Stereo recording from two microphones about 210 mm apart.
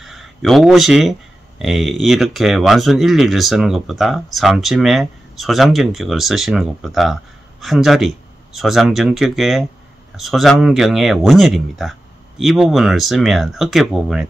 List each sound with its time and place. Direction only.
0.0 s speech: centre (ahead or behind)